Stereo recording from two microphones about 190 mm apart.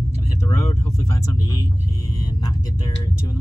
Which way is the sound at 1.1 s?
15° left (ahead or behind).